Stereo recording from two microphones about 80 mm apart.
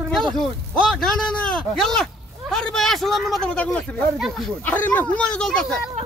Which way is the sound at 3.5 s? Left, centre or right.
Centre.